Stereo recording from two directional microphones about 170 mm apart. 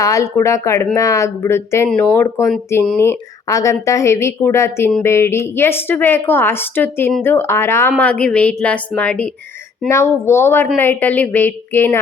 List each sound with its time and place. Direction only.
0.0 s speech: 20° left (ahead or behind)
1.9 s speech: 5° left (ahead or behind)
2.1 s speech: 20° left (ahead or behind)